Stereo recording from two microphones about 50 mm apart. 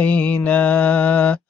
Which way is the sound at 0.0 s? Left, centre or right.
Left.